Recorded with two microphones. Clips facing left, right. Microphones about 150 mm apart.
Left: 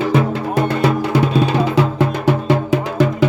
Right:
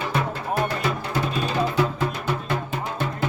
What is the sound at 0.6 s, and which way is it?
Music, 70° left (ahead or behind).